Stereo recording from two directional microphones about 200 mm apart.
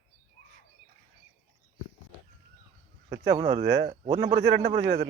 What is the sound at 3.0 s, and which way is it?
Speech, 25° right (ahead or behind).